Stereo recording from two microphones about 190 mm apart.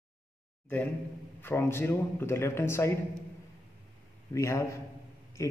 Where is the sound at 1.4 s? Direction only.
10° left (ahead or behind).